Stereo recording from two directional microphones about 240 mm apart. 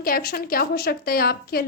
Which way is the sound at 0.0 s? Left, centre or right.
Left.